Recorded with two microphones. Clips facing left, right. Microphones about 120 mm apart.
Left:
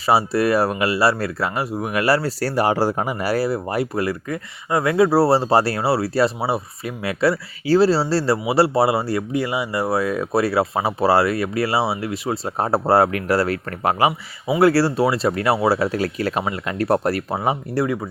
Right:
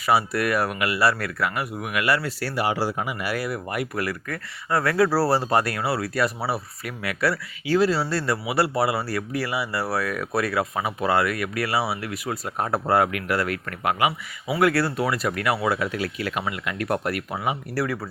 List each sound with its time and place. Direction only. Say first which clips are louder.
0.0 s speech: left 4 dB; 30° left (ahead or behind)
17.7 s speech: left 5 dB; 20° left (ahead or behind)